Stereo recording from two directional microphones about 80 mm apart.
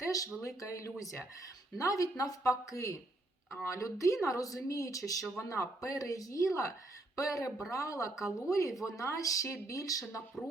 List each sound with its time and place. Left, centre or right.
0.0 s a sound: left
0.4 s speech: left
10.4 s speech: centre